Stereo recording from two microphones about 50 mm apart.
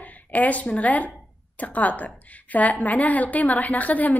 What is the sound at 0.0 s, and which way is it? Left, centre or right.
A woman's voice, left.